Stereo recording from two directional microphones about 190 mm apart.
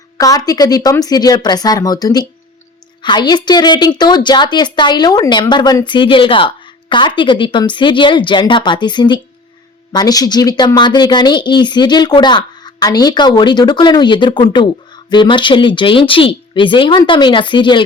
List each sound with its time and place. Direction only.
0.2 s a woman's voice: 20° left (ahead or behind)